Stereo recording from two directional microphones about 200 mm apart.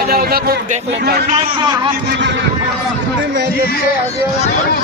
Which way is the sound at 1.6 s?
25° right (ahead or behind).